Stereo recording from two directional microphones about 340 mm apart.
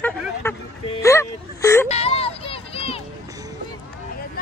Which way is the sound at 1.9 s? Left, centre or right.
Centre.